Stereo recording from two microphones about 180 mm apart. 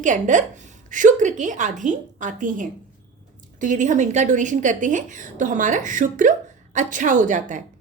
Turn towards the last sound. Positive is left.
turn(degrees=-45)  # may be behind; listen again after turning